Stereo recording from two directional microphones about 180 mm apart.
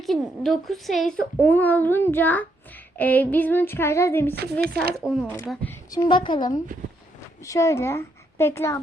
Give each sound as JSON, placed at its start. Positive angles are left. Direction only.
{"t": 0.0, "sound": "a woman's voice", "side_deg": 0}
{"t": 5.9, "sound": "a woman's voice", "side_deg": 25}